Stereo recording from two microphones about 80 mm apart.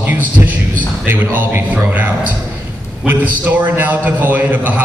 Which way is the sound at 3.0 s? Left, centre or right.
Right.